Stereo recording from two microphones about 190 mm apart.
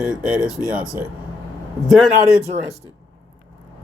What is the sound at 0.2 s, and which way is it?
Speech, 5° right (ahead or behind).